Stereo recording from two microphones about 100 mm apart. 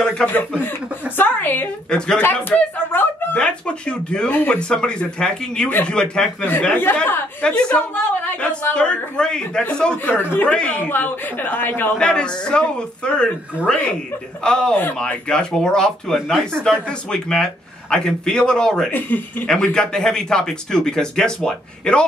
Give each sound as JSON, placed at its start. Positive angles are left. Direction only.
{"t": 0.0, "sound": "speech", "side_deg": 15}
{"t": 1.9, "sound": "speech", "side_deg": 10}
{"t": 10.1, "sound": "speech", "side_deg": 25}
{"t": 10.5, "sound": "speech", "side_deg": 10}
{"t": 12.0, "sound": "speech", "side_deg": 10}
{"t": 18.9, "sound": "speech", "side_deg": 20}